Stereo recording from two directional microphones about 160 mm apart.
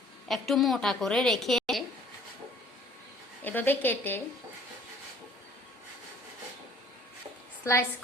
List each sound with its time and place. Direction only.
0.3 s a woman's voice: centre (ahead or behind)
3.4 s a woman's voice: 10° left (ahead or behind)
7.6 s a woman's voice: 15° left (ahead or behind)